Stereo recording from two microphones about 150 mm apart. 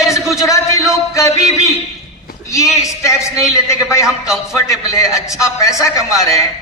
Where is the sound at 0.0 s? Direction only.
20° left (ahead or behind).